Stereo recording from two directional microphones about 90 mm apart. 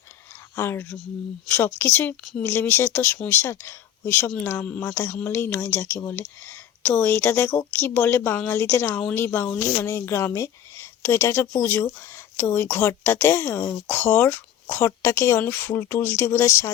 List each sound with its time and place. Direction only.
0.5 s speech: 30° left (ahead or behind)
4.6 s speech: 15° left (ahead or behind); by 16.7 s 30° left (ahead or behind)